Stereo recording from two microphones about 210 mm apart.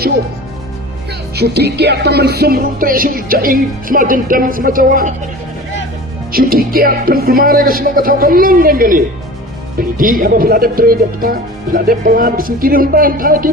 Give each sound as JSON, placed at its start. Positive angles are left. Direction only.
{"t": 1.4, "sound": "music", "side_deg": -50}
{"t": 6.3, "sound": "music", "side_deg": -45}